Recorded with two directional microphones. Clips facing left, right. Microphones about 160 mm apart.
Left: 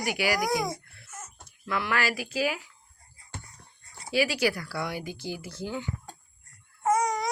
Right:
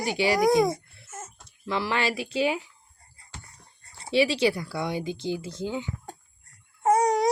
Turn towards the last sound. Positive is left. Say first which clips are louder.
# right 4 dB
turn(degrees=-35)  # may be behind; listen again after turning